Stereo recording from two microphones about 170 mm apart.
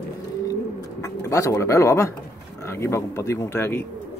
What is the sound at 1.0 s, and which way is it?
Speech, 20° left (ahead or behind).